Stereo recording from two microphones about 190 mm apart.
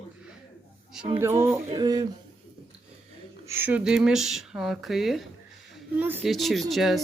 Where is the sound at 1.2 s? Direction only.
15° right (ahead or behind).